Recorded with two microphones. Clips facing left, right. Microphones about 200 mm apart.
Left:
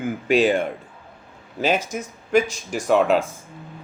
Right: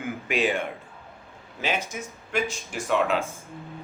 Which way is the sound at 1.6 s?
40° left (ahead or behind).